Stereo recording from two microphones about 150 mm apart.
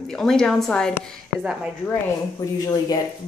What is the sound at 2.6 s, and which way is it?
Speech, 25° left (ahead or behind).